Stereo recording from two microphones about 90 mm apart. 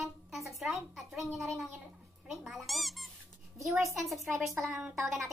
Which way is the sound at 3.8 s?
35° right (ahead or behind).